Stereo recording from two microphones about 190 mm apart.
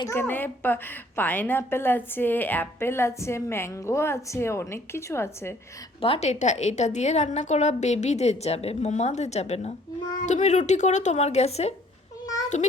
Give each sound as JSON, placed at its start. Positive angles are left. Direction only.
{"t": 0.0, "sound": "a woman's voice", "side_deg": 10}
{"t": 6.0, "sound": "a woman's voice", "side_deg": 30}
{"t": 12.2, "sound": "cat", "side_deg": 20}